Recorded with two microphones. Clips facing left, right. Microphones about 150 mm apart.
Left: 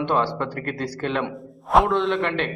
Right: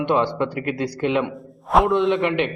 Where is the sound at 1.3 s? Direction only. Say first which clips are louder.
Even; centre (ahead or behind).